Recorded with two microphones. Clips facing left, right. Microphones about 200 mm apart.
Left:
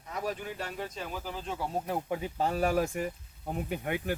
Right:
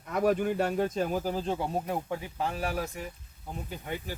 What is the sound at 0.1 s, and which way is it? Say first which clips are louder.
Speech: right 9 dB; 55° right (ahead or behind).